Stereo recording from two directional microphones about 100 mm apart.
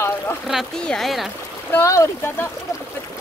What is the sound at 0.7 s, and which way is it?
Speech, 5° left (ahead or behind).